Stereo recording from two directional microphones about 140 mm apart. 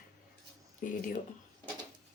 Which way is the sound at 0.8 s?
75° left (ahead or behind).